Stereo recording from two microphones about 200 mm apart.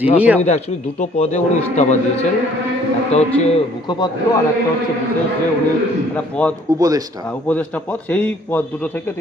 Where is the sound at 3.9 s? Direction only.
20° left (ahead or behind).